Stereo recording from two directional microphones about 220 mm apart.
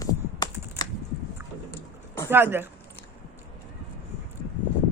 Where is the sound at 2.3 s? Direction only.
10° right (ahead or behind).